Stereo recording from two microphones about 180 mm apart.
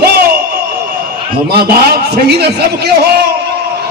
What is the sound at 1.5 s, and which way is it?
A man's voice, 60° right (ahead or behind).